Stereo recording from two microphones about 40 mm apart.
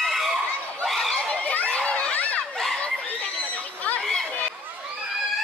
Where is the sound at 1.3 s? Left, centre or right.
Left.